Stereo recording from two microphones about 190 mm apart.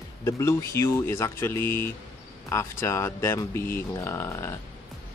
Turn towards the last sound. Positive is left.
turn(degrees=15)  # may be behind; listen again after turning